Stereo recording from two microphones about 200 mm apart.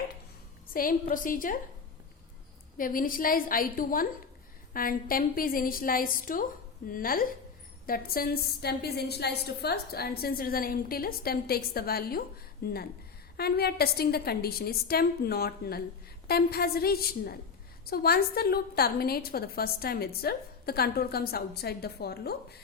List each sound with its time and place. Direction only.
0.7 s a woman's voice: 45° left (ahead or behind)
2.7 s a woman's voice: 45° left (ahead or behind)